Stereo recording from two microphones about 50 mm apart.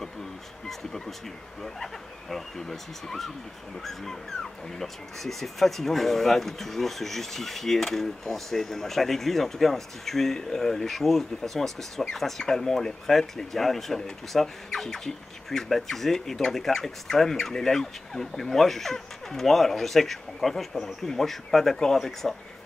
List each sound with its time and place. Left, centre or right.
0.7 s speech: centre